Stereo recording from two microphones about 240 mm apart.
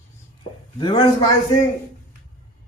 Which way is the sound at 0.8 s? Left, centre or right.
Centre.